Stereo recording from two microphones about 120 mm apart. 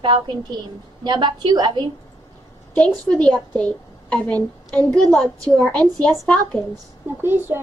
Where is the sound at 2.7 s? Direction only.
10° left (ahead or behind).